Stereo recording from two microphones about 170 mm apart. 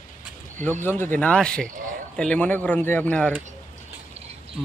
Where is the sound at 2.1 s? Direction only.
5° left (ahead or behind).